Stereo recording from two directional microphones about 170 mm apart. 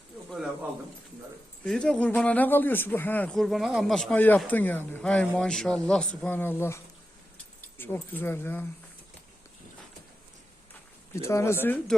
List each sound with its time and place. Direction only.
1.6 s speech: 5° left (ahead or behind)
11.1 s speech: 15° left (ahead or behind)